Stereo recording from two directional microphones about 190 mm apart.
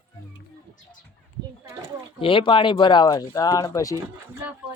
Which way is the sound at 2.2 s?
25° left (ahead or behind).